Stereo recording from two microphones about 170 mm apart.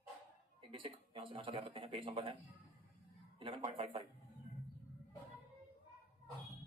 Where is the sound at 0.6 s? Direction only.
35° right (ahead or behind).